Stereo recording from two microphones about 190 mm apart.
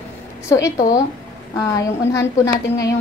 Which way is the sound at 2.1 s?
15° left (ahead or behind).